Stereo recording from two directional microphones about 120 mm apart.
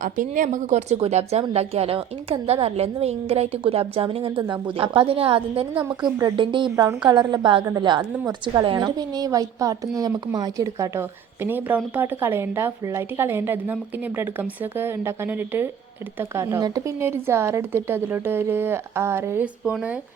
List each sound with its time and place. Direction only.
0.0 s speech: 90° right; by 4.3 s 50° right (ahead or behind)
4.4 s a woman's voice: 40° right (ahead or behind)
6.7 s a woman's voice: 35° right (ahead or behind)
19.6 s a woman's voice: 10° right (ahead or behind)